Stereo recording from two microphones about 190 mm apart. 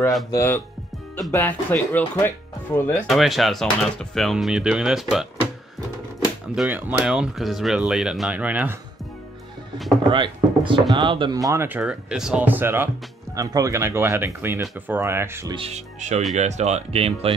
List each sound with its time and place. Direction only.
0.3 s speech: 15° left (ahead or behind)
3.1 s speech: centre (ahead or behind)
6.5 s speech: 5° right (ahead or behind)
10.0 s speech: 25° right (ahead or behind)
15.5 s speech: 35° right (ahead or behind)